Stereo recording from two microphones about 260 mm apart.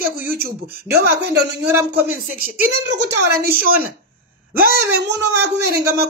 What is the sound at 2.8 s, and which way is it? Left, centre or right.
Speech, right.